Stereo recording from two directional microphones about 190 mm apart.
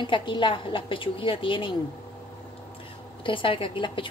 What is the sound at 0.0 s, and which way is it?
A woman's voice, 25° left (ahead or behind).